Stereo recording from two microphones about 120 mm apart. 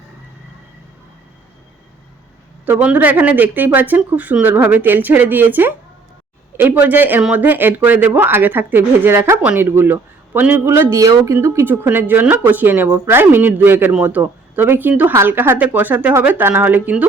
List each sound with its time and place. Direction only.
2.6 s speech: 15° right (ahead or behind)